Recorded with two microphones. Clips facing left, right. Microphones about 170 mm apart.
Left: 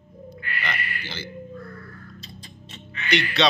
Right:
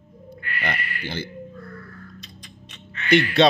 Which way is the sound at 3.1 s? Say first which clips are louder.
Right 6 dB; 50° right (ahead or behind).